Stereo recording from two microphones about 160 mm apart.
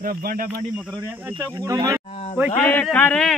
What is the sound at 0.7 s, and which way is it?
Speech, 10° right (ahead or behind).